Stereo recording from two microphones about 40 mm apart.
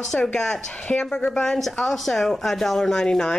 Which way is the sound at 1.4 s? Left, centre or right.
Centre.